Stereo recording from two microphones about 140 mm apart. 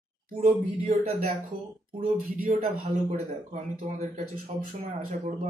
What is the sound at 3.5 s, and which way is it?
Speech, 55° right (ahead or behind).